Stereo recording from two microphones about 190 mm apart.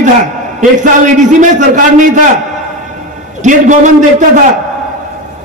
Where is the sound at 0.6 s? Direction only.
40° right (ahead or behind).